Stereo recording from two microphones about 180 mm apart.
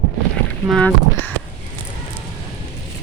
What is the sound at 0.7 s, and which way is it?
Speech, 5° left (ahead or behind).